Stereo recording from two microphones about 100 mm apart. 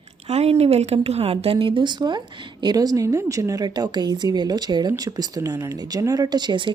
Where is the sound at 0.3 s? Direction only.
90° right.